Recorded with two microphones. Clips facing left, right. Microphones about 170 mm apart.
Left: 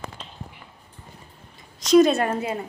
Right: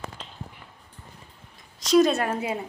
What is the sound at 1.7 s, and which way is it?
Speech, centre (ahead or behind).